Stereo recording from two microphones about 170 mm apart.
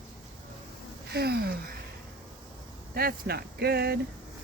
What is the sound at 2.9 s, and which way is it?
Speech, 65° right (ahead or behind).